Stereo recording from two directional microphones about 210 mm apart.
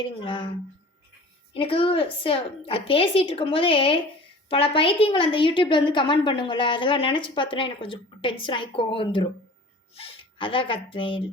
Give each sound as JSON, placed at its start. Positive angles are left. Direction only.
{"t": 0.0, "sound": "a woman's voice", "side_deg": 25}
{"t": 1.5, "sound": "a woman's voice", "side_deg": 25}